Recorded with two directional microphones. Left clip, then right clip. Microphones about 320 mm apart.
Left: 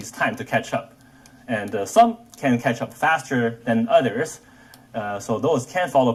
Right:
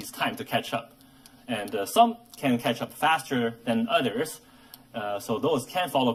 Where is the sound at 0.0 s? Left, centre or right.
Centre.